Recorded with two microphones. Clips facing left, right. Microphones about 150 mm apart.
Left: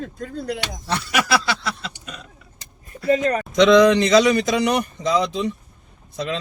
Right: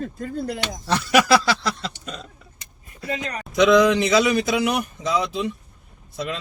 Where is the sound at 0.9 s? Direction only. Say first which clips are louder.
Right 4 dB; 35° right (ahead or behind).